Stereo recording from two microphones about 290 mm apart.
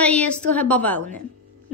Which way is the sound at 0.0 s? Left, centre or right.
Centre.